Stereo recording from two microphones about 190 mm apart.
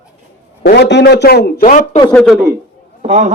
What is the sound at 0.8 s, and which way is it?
A man's voice, 65° left (ahead or behind).